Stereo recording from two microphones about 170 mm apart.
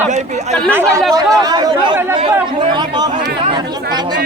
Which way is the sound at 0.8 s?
Centre (ahead or behind).